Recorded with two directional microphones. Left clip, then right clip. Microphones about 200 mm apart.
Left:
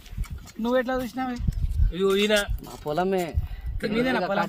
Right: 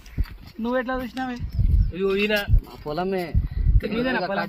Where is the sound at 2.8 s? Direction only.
10° right (ahead or behind).